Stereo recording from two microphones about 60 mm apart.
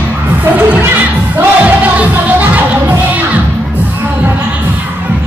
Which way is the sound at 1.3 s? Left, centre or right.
Right.